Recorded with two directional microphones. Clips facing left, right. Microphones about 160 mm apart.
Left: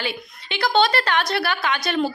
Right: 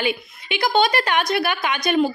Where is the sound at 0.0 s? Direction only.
15° right (ahead or behind).